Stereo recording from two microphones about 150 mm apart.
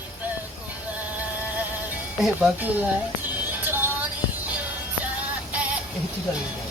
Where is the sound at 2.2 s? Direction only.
5° right (ahead or behind).